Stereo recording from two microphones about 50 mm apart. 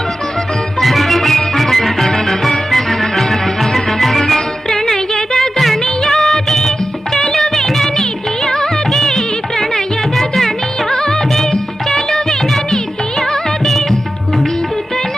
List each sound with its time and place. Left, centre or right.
0.8 s music: centre